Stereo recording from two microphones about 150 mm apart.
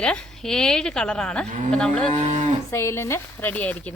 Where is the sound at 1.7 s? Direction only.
5° left (ahead or behind).